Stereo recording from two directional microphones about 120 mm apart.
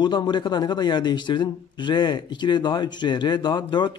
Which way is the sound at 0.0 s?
40° left (ahead or behind).